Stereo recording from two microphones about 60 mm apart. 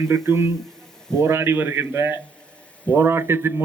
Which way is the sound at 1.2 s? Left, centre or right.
Right.